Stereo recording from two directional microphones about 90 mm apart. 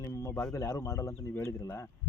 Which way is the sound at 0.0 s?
35° left (ahead or behind).